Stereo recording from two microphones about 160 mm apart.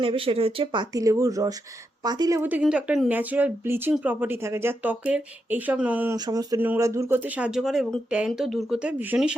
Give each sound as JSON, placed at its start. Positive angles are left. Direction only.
{"t": 0.0, "sound": "speech", "side_deg": -35}
{"t": 2.4, "sound": "speech", "side_deg": -10}
{"t": 6.1, "sound": "speech", "side_deg": -25}